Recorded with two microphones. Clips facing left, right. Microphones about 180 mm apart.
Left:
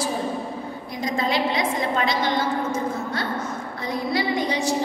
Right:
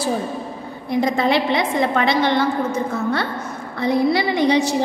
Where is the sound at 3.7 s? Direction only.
65° right (ahead or behind).